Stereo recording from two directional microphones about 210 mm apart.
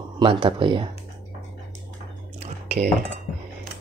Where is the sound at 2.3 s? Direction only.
30° right (ahead or behind).